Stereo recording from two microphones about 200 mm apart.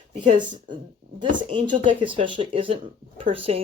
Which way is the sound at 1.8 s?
25° right (ahead or behind).